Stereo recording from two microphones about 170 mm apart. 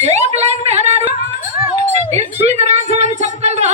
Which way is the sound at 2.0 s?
40° right (ahead or behind).